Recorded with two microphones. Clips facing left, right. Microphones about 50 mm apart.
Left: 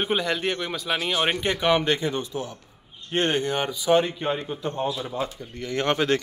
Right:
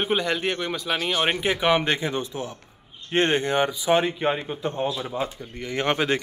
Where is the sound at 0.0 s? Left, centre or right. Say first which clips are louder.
Right 1 dB; centre.